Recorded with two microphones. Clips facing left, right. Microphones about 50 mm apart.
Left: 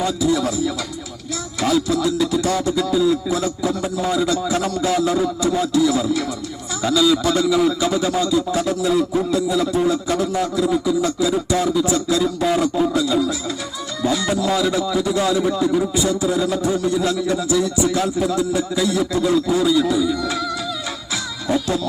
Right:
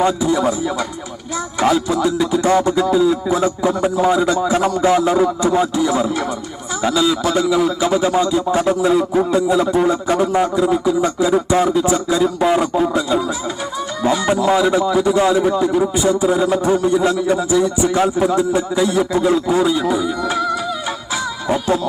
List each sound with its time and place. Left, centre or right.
0.0 s a man's voice: right
14.0 s a sound: right
14.5 s a man's voice: right
21.4 s music: centre